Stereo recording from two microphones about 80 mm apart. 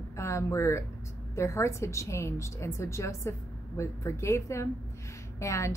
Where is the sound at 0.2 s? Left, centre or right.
Left.